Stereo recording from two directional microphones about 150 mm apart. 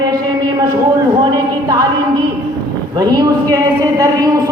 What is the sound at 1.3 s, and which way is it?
Speech, 25° right (ahead or behind).